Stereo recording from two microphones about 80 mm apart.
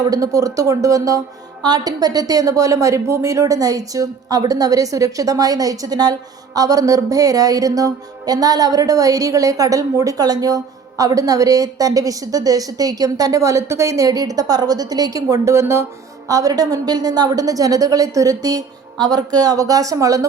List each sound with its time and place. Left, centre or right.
0.0 s speech: right
1.6 s speech: right
16.3 s speech: right